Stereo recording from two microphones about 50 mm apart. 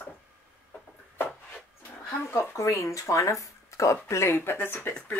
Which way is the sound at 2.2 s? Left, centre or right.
Left.